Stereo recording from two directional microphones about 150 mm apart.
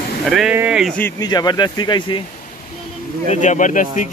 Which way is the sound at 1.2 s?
25° left (ahead or behind).